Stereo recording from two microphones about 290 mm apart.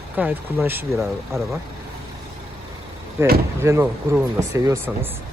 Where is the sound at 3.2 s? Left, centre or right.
Centre.